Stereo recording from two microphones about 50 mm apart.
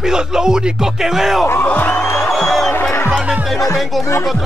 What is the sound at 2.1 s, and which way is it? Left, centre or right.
Music, centre.